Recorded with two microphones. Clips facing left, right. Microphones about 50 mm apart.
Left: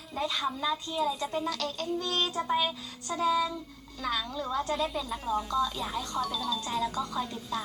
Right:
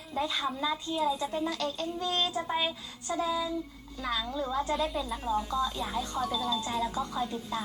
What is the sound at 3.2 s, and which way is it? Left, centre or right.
Child singing, left.